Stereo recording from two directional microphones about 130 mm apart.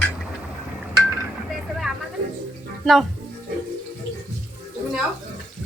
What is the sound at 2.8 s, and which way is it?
Speech, centre (ahead or behind).